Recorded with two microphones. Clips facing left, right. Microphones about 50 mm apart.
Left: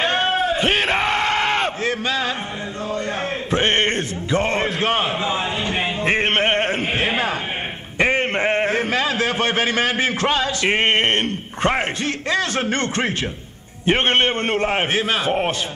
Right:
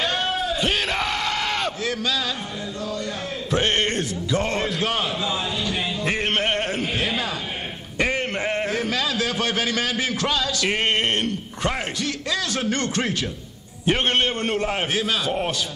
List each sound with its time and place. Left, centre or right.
0.0 s yell: left
3.4 s a sound: left
8.0 s a man's voice: left